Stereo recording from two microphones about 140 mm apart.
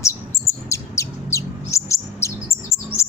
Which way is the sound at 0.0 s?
20° left (ahead or behind).